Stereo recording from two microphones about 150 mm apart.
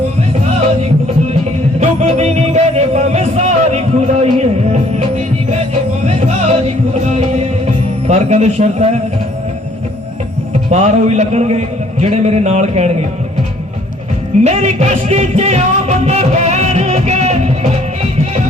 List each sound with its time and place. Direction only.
1.8 s music: 50° right (ahead or behind)
6.1 s music: 45° right (ahead or behind)
8.0 s a man's voice: 50° right (ahead or behind)
10.7 s a man's voice: 45° right (ahead or behind)
14.4 s music: 45° right (ahead or behind)